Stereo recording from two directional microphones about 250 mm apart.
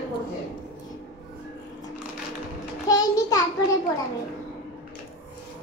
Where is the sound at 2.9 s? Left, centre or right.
Centre.